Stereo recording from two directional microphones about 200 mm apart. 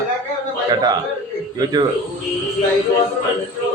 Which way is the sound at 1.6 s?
20° right (ahead or behind).